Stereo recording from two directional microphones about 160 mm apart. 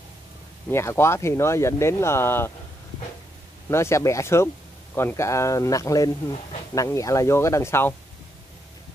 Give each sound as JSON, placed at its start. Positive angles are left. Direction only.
{"t": 0.7, "sound": "speech", "side_deg": 15}
{"t": 3.7, "sound": "speech", "side_deg": 15}